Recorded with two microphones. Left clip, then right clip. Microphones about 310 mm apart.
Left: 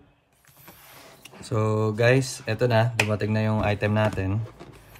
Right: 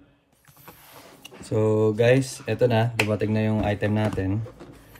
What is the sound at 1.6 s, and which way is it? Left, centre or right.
Speech, left.